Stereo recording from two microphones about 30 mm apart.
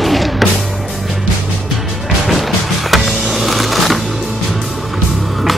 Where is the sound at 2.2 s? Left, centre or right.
Centre.